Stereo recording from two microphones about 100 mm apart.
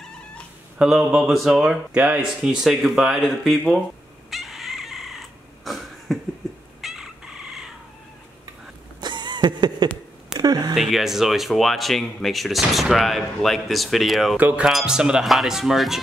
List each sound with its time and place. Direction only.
0.7 s speech: 5° right (ahead or behind)
4.3 s cat: centre (ahead or behind)
6.8 s fowl: 5° right (ahead or behind)
9.0 s a sound: 50° right (ahead or behind)
10.7 s speech: centre (ahead or behind)
14.3 s speech: 15° right (ahead or behind)